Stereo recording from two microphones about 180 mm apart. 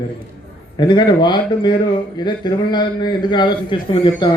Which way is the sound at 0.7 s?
25° left (ahead or behind).